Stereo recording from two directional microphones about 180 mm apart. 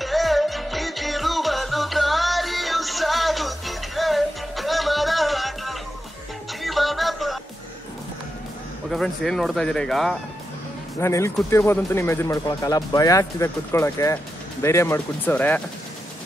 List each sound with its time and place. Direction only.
0.0 s music: centre (ahead or behind)
8.9 s speech: centre (ahead or behind)
11.0 s speech: 15° left (ahead or behind)